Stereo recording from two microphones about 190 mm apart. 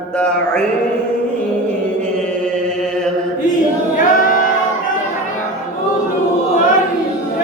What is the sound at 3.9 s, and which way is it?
Music, 45° left (ahead or behind).